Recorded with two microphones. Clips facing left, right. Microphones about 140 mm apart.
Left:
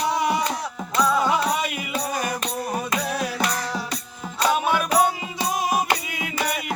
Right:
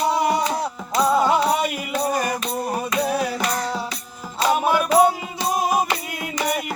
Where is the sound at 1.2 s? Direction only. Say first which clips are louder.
Right 3 dB; centre (ahead or behind).